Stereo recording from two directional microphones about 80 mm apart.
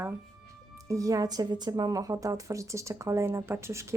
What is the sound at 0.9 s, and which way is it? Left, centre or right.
A woman's voice, right.